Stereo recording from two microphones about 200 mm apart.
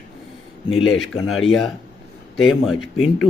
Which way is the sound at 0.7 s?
90° left.